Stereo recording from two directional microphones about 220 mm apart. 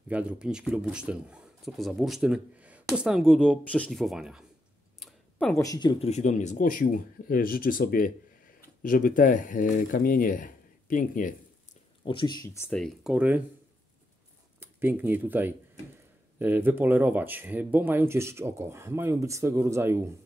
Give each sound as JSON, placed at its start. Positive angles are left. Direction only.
{"t": 0.1, "sound": "speech", "side_deg": -5}
{"t": 12.0, "sound": "speech", "side_deg": 20}
{"t": 14.6, "sound": "speech", "side_deg": -10}